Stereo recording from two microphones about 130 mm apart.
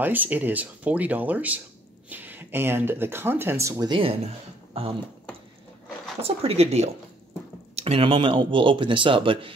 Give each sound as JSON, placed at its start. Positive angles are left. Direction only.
{"t": 0.0, "sound": "speech", "side_deg": -15}
{"t": 3.9, "sound": "speech", "side_deg": -45}
{"t": 6.2, "sound": "speech", "side_deg": -50}